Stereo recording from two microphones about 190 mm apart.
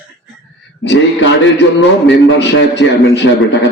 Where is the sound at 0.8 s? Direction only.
75° left (ahead or behind).